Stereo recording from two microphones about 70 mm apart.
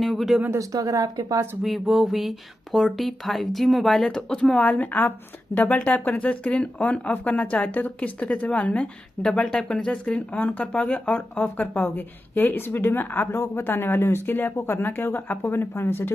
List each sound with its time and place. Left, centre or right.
0.0 s speech: centre
0.5 s speech: right
1.6 s a woman's voice: centre; by 16.1 s left